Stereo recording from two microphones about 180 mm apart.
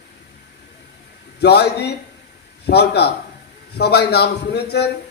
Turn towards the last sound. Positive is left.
turn(degrees=65)  # may be behind; listen again after turning